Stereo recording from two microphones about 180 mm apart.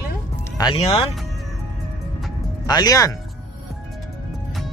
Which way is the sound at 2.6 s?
20° left (ahead or behind).